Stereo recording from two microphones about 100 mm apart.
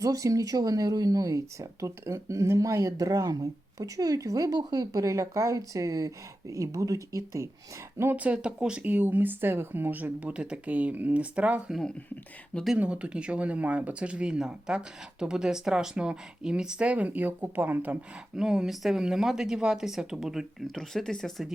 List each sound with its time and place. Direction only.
0.0 s speech: 35° right (ahead or behind)
7.9 s speech: 20° right (ahead or behind)
11.7 s speech: 5° left (ahead or behind)
12.7 s speech: 10° right (ahead or behind)
18.3 s speech: 5° right (ahead or behind)